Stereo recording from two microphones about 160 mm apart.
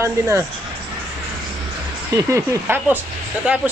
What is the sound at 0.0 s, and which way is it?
Speech, 15° right (ahead or behind).